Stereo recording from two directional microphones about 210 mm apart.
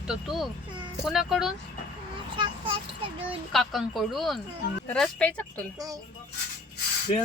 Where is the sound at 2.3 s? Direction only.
25° right (ahead or behind).